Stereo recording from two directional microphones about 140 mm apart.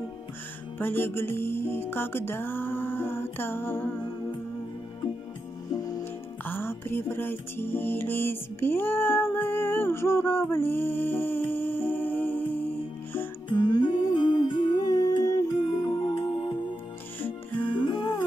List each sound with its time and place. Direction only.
0.7 s music: 15° left (ahead or behind)
6.4 s music: 15° left (ahead or behind)
13.5 s music: 30° left (ahead or behind)